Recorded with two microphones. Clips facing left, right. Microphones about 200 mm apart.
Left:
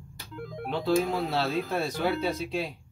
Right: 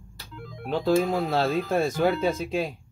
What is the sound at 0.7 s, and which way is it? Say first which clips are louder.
Speech: right 3 dB; 45° right (ahead or behind).